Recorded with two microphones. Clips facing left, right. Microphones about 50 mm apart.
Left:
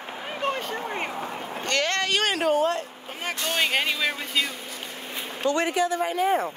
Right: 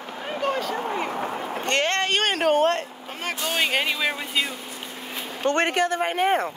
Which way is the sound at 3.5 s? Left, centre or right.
Centre.